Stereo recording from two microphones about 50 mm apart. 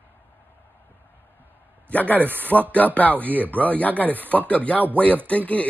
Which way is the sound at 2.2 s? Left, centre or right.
Right.